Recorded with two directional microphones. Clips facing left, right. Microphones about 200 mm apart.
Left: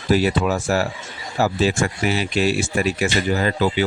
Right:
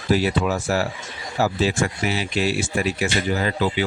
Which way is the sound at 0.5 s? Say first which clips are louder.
Left 2 dB; 45° left (ahead or behind).